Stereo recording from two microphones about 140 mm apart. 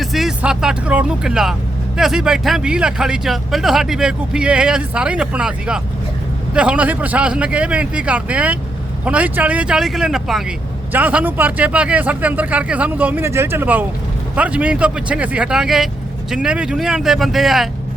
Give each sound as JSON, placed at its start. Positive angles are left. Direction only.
{"t": 0.0, "sound": "speech", "side_deg": 0}